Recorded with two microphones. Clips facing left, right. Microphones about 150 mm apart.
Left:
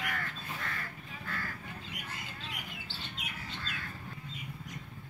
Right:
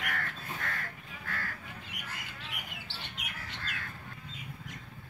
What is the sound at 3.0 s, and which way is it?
Bird, 70° right (ahead or behind).